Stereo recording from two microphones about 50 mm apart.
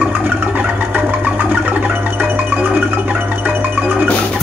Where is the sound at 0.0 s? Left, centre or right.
Right.